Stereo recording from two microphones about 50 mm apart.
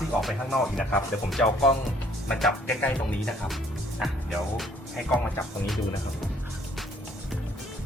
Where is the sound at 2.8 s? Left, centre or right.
Left.